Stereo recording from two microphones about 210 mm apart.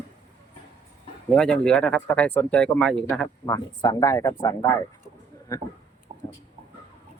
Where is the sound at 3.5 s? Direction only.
15° left (ahead or behind).